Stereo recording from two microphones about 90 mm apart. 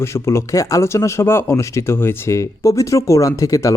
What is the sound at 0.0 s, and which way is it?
Speech, 30° left (ahead or behind).